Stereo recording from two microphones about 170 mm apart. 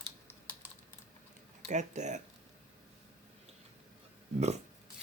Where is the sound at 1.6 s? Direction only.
45° right (ahead or behind).